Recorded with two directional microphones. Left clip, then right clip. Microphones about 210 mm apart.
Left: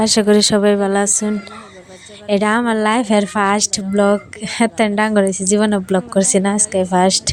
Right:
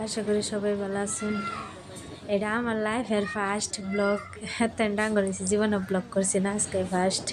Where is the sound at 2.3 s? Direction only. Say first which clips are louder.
Left 12 dB; 45° left (ahead or behind).